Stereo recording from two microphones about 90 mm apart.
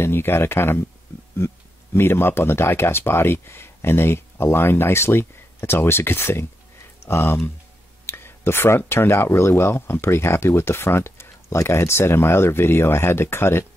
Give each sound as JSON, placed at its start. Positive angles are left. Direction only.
{"t": 0.0, "sound": "speech", "side_deg": 25}